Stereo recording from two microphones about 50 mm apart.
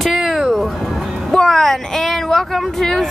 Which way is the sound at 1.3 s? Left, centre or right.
Centre.